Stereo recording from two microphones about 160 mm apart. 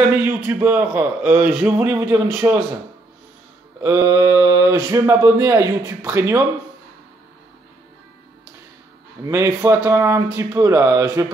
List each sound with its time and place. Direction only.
0.1 s a man's voice: 10° right (ahead or behind)
3.8 s speech: 20° right (ahead or behind)
9.2 s a man's voice: 20° right (ahead or behind)